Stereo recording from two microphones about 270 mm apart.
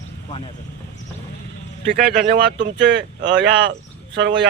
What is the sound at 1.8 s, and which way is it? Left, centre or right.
Speech, right.